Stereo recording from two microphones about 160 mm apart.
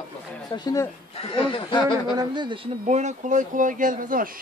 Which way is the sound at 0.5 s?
25° left (ahead or behind).